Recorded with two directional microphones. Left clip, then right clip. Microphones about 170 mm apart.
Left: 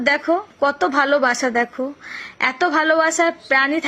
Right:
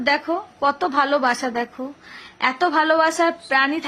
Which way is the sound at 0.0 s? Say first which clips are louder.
Left 3 dB; 15° left (ahead or behind).